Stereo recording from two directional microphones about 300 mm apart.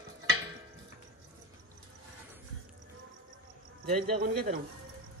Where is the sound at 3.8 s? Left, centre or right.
Right.